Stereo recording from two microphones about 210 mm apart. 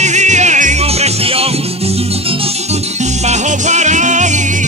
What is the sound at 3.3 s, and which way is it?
Music, 35° right (ahead or behind).